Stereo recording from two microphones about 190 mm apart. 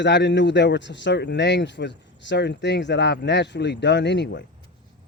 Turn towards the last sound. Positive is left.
turn(degrees=65)  # may be behind; listen again after turning